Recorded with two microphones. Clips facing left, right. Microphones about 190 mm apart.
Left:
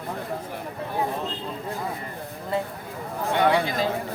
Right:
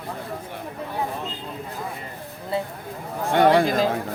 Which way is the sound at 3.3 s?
45° right (ahead or behind).